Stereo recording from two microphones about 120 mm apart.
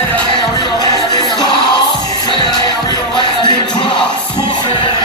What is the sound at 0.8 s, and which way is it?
Music, 35° left (ahead or behind).